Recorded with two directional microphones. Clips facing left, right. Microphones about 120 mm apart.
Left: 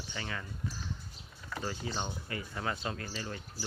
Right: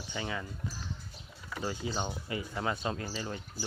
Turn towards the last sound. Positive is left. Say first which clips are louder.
# right 3 dB
turn(degrees=-20)  # may be behind; listen again after turning